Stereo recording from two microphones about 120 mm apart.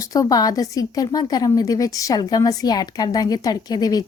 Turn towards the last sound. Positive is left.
turn(degrees=30)  # may be behind; listen again after turning